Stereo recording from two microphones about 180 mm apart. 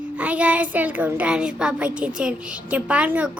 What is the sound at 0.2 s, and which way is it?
A child's voice, 10° right (ahead or behind).